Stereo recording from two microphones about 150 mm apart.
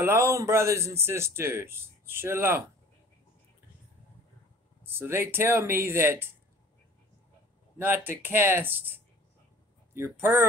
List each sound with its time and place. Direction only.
0.0 s speech: 20° right (ahead or behind)
4.8 s speech: 15° right (ahead or behind)
7.8 s speech: 15° right (ahead or behind)